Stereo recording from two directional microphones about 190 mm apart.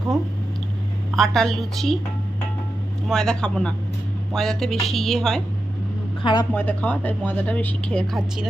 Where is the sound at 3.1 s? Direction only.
5° left (ahead or behind).